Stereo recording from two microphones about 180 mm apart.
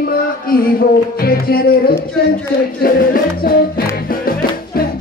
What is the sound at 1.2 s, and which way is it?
Music, 55° left (ahead or behind).